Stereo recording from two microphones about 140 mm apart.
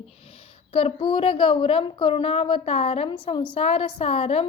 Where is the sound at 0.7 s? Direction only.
40° left (ahead or behind).